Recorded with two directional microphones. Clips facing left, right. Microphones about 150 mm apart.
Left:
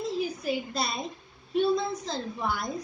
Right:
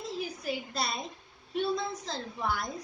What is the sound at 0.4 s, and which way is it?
A woman's voice, 20° left (ahead or behind).